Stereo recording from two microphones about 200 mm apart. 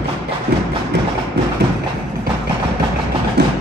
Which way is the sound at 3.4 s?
55° right (ahead or behind).